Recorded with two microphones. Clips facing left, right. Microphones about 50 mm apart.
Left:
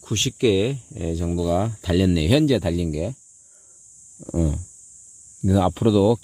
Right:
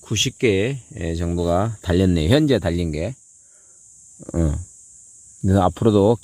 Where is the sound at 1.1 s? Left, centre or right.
Right.